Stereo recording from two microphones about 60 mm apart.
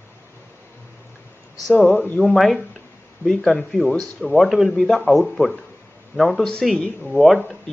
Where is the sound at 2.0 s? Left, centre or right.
Left.